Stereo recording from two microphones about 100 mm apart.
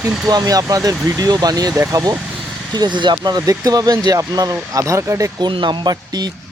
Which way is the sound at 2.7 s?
50° right (ahead or behind).